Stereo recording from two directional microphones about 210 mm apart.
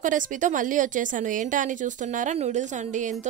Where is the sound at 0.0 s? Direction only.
35° right (ahead or behind).